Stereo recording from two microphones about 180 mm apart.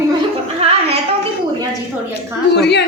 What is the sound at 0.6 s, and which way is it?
Music, 35° right (ahead or behind).